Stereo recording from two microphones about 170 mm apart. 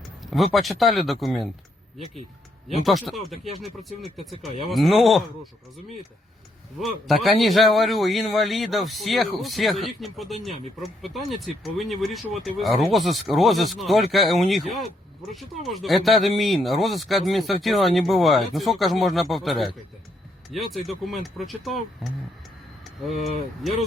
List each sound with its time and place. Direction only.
0.2 s speech: centre (ahead or behind)
2.8 s speech: centre (ahead or behind)
4.7 s speech: centre (ahead or behind)
6.7 s speech: centre (ahead or behind)
23.1 s speech: 40° left (ahead or behind)